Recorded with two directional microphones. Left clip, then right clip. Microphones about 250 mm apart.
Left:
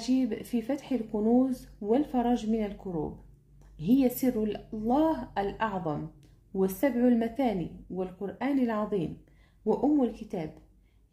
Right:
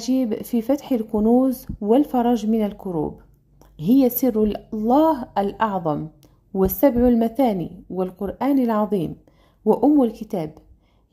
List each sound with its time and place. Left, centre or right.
0.0 s speech: right